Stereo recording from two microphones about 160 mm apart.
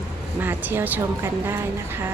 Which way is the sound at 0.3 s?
10° right (ahead or behind).